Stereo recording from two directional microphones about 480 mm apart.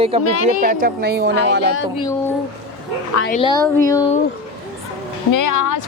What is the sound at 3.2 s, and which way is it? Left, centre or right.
Speech, centre.